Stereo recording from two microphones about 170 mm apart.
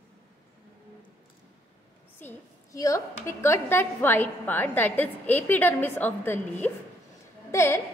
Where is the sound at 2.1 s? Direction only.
15° left (ahead or behind).